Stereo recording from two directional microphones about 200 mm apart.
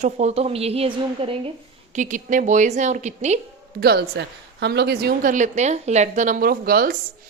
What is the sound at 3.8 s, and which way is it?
A woman's voice, 55° right (ahead or behind).